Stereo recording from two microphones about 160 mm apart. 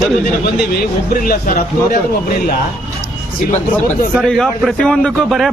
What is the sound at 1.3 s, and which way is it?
Speech, 65° left (ahead or behind).